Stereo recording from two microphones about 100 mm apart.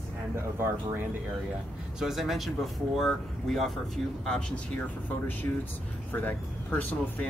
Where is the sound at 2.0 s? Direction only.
Centre (ahead or behind).